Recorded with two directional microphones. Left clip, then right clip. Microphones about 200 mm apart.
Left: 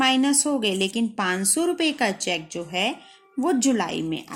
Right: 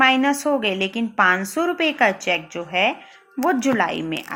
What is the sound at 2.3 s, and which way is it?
A woman's voice, 35° left (ahead or behind).